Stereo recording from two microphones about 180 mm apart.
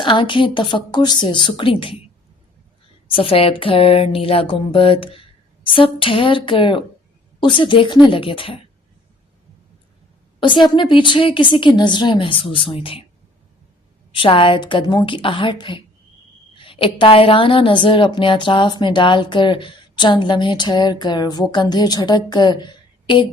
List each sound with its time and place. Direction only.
0.0 s a woman's voice: 25° left (ahead or behind)
3.1 s a woman's voice: 30° left (ahead or behind)
10.4 s a woman's voice: 25° left (ahead or behind)
14.1 s a woman's voice: 30° left (ahead or behind)